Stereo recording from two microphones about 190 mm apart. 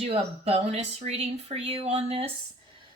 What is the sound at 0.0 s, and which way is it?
A woman's voice, 30° right (ahead or behind).